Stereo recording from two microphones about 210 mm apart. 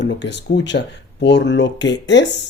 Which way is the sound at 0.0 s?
55° left (ahead or behind).